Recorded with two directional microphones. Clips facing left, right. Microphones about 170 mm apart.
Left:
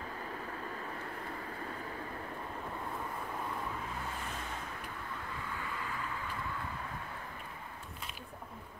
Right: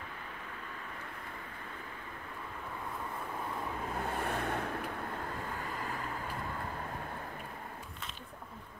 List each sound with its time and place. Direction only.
4.1 s vehicle: 60° right (ahead or behind)
5.4 s vehicle: 45° right (ahead or behind)